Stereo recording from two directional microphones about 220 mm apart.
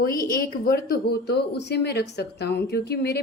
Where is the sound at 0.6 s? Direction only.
45° left (ahead or behind).